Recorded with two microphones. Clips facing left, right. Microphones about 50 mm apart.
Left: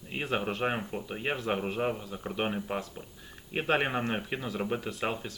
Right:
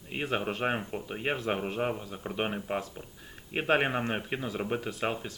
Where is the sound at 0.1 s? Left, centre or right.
Centre.